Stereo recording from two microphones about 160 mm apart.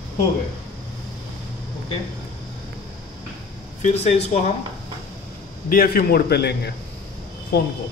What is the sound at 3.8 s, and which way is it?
Speech, 45° left (ahead or behind).